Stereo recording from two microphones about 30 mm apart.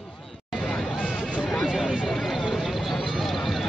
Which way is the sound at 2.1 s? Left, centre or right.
Centre.